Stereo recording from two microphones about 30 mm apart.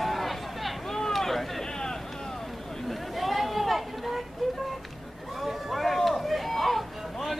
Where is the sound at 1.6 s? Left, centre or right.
Left.